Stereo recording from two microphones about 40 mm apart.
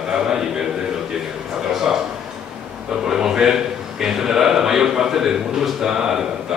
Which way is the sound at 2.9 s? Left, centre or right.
Centre.